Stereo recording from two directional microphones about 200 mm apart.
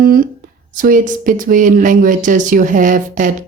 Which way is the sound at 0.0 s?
45° right (ahead or behind).